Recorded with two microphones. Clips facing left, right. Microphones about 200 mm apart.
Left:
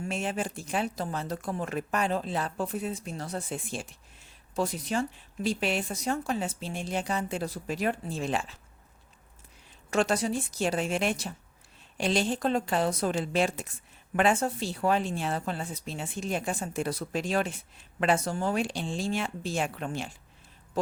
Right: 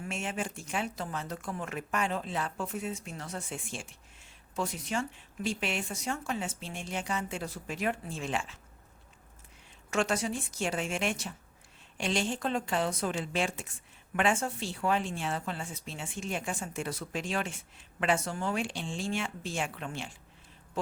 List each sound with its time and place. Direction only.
0.0 s speech: 35° left (ahead or behind)
9.9 s speech: 35° left (ahead or behind)